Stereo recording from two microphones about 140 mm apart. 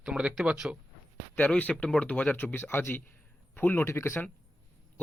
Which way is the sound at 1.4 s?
10° left (ahead or behind).